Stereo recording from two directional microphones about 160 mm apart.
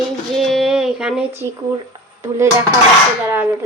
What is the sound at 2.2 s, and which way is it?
Speech, 15° right (ahead or behind).